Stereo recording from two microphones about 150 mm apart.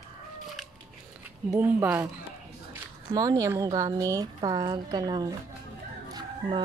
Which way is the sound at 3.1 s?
25° right (ahead or behind).